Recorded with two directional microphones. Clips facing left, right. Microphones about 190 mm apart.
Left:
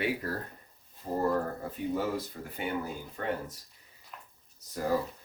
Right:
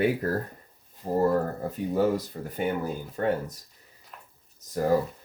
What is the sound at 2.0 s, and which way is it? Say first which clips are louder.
Speech: right 8 dB; 40° right (ahead or behind).